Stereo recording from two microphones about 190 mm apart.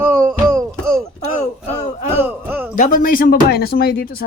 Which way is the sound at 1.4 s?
35° left (ahead or behind).